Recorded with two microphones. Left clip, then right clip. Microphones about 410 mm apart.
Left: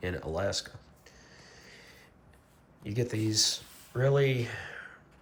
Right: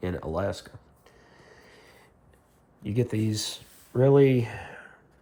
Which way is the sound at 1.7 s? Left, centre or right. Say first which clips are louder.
Left 1 dB; centre.